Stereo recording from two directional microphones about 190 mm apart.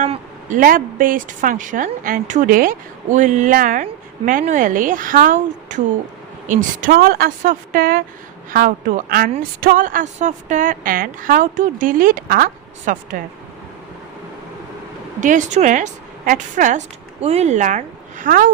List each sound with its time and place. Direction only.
0.0 s speech: 40° right (ahead or behind)
15.2 s a woman's voice: 40° right (ahead or behind)